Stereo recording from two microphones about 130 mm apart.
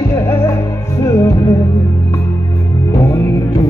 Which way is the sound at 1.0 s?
20° left (ahead or behind).